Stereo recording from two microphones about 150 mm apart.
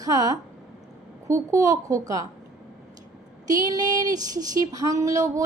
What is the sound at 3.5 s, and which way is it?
A woman's voice, 25° right (ahead or behind).